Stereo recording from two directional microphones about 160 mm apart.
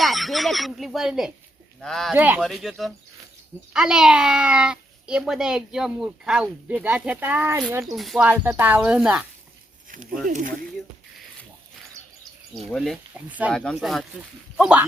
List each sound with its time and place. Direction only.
0.0 s a child's voice: centre (ahead or behind)
2.1 s speech: 10° right (ahead or behind)
2.4 s a child's voice: centre (ahead or behind); by 7.9 s 20° right (ahead or behind)
7.9 s speech: centre (ahead or behind)
10.2 s speech: 55° right (ahead or behind)
12.7 s a child's voice: centre (ahead or behind)